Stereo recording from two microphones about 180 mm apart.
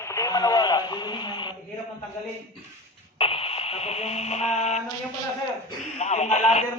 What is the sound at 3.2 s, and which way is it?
Speech, 30° left (ahead or behind).